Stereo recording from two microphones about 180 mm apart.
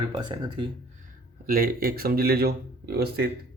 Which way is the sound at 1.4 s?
55° right (ahead or behind).